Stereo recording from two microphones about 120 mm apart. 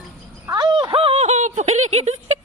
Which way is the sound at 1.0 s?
55° right (ahead or behind).